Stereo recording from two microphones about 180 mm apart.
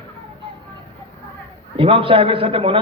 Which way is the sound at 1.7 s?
30° right (ahead or behind).